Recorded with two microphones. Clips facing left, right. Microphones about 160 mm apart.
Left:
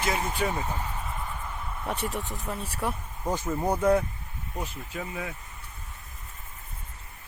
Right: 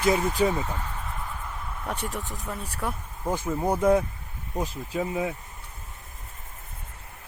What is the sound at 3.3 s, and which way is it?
Speech, 10° right (ahead or behind).